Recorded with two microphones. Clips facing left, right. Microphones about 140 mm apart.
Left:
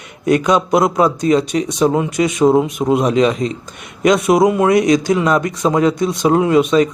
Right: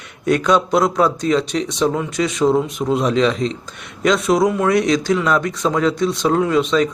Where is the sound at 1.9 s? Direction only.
20° left (ahead or behind).